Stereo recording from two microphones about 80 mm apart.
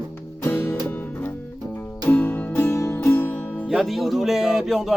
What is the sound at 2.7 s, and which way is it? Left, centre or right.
Music, left.